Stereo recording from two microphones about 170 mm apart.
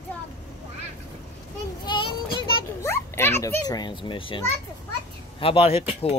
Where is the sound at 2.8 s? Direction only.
15° left (ahead or behind).